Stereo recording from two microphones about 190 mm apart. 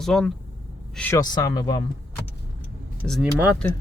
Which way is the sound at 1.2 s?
20° left (ahead or behind).